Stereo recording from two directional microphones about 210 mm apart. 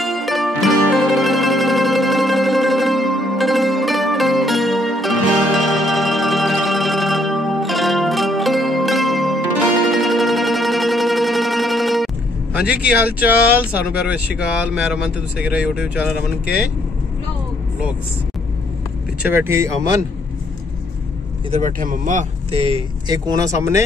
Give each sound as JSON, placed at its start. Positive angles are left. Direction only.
{"t": 0.0, "sound": "music", "side_deg": 0}
{"t": 13.0, "sound": "speech", "side_deg": -5}
{"t": 19.2, "sound": "speech", "side_deg": -10}
{"t": 21.5, "sound": "speech", "side_deg": -35}